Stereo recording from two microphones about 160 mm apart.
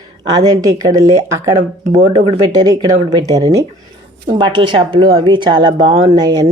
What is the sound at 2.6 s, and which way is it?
Speech, 25° right (ahead or behind).